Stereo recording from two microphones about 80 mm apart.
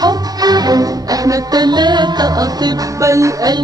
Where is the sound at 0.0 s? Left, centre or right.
Right.